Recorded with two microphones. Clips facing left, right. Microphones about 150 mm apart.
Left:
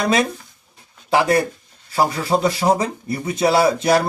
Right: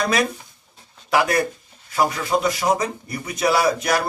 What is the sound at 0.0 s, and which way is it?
A man's voice, 25° left (ahead or behind).